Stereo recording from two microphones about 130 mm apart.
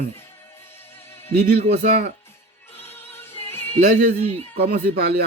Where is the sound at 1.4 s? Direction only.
90° right.